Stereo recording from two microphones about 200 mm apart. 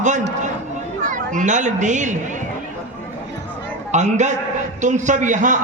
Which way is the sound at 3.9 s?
35° right (ahead or behind).